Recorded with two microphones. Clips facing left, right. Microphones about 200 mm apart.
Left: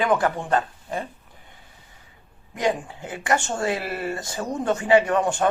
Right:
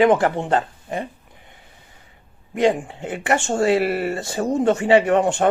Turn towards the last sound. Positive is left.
turn(degrees=-25)  # may be behind; listen again after turning